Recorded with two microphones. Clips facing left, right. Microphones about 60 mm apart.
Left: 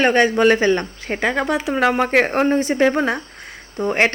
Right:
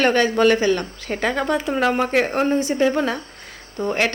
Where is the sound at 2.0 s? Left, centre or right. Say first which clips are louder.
Left 3 dB; left.